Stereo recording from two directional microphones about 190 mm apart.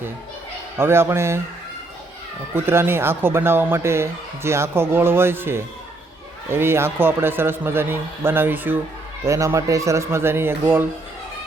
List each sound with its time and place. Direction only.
0.8 s speech: 10° right (ahead or behind)
2.6 s speech: 10° right (ahead or behind)